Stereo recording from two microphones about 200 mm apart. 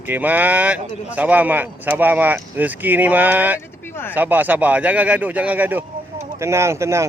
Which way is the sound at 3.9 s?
10° left (ahead or behind).